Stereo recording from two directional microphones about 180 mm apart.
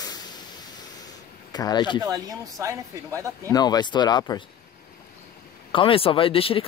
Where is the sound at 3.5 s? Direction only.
20° left (ahead or behind).